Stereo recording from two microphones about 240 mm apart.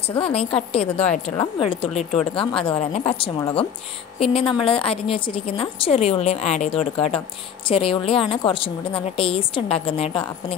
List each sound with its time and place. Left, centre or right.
0.2 s a woman's voice: left